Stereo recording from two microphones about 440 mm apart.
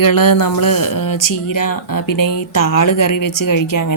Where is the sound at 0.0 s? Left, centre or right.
Left.